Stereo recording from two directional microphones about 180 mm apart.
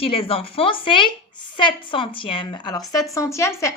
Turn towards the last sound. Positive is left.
turn(degrees=15)  # may be behind; listen again after turning